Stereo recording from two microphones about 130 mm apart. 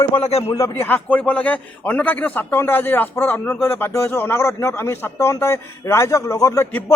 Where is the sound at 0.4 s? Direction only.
20° left (ahead or behind).